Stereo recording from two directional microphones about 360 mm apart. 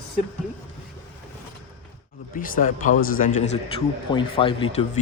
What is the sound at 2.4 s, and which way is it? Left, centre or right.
A man's voice, left.